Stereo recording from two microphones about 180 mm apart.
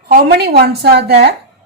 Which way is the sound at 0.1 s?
60° right (ahead or behind).